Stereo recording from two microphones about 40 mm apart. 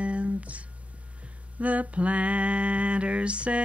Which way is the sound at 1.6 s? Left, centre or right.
Right.